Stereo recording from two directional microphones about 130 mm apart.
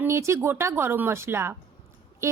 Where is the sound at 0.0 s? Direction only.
20° right (ahead or behind).